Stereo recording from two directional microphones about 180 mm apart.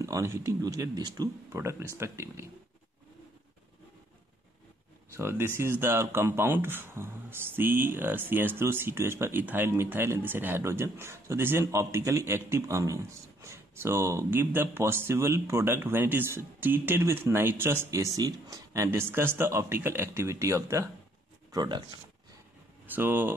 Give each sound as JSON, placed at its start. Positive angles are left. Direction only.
{"t": 0.0, "sound": "speech", "side_deg": -15}
{"t": 5.1, "sound": "speech", "side_deg": -15}
{"t": 22.9, "sound": "speech", "side_deg": -10}